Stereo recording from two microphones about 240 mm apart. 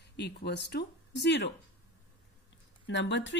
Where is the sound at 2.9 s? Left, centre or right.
Left.